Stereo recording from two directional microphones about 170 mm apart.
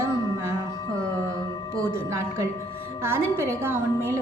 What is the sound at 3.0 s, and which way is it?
A woman's voice, 15° right (ahead or behind).